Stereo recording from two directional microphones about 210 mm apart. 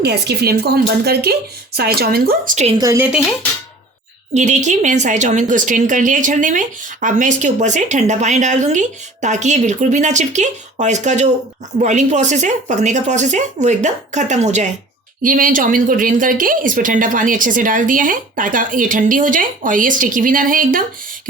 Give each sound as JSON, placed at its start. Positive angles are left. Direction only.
{"t": 0.0, "sound": "speech", "side_deg": -50}
{"t": 2.7, "sound": "speech", "side_deg": -15}
{"t": 4.4, "sound": "a woman's voice", "side_deg": -35}